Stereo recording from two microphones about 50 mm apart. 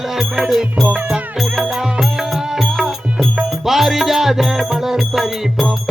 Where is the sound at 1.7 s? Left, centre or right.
Centre.